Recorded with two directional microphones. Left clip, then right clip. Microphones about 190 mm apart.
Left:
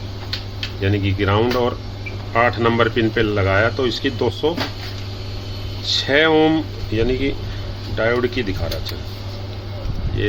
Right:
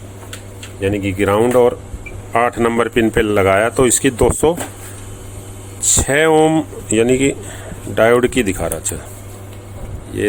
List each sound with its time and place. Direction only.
0.8 s speech: 35° right (ahead or behind); by 4.5 s 55° right (ahead or behind)
6.0 s speech: 55° right (ahead or behind)
10.2 s speech: 45° right (ahead or behind)